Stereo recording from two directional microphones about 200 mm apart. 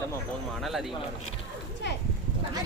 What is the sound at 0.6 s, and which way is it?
Speech, centre (ahead or behind).